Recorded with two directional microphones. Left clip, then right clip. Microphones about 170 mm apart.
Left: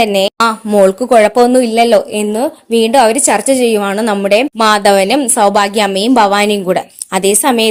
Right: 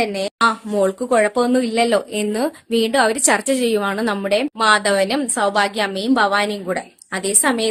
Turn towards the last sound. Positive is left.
turn(degrees=40)  # may be behind; listen again after turning